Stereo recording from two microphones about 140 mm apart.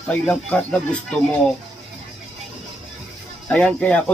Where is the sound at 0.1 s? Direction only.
10° left (ahead or behind).